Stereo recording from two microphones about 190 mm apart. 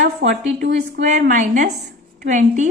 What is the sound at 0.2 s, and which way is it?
Speech, 65° right (ahead or behind).